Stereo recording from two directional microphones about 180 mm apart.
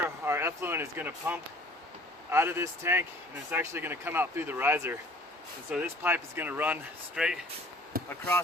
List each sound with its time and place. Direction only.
0.3 s speech: 15° right (ahead or behind)
7.9 s speech: 55° right (ahead or behind)